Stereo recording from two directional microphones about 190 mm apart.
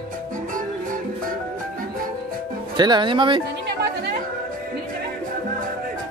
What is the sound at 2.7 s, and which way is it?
Speech, 25° right (ahead or behind).